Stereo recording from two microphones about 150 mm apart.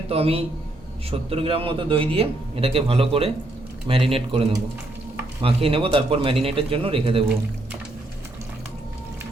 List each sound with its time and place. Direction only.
0.1 s speech: 40° right (ahead or behind)